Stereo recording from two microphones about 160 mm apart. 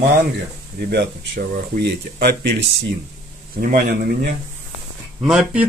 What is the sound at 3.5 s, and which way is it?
Speech, 60° right (ahead or behind).